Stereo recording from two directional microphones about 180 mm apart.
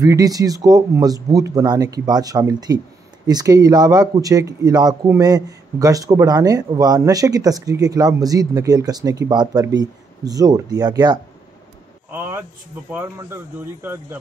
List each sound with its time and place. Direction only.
0.0 s speech: 20° right (ahead or behind)
12.1 s a sound: 10° right (ahead or behind)
12.9 s speech: 15° right (ahead or behind)